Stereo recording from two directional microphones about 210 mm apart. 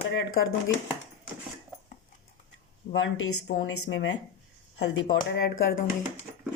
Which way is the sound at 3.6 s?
60° left (ahead or behind).